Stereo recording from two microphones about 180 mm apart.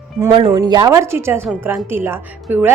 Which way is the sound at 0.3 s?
30° right (ahead or behind).